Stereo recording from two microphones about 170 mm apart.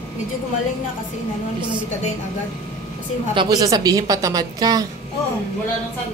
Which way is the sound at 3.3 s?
25° right (ahead or behind).